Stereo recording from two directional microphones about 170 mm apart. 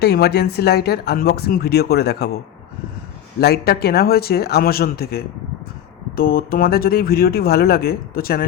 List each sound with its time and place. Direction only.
0.0 s speech: 70° left (ahead or behind)
3.4 s speech: 65° left (ahead or behind)